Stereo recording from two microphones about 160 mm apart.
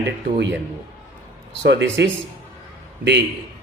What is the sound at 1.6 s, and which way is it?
Speech, 90° right.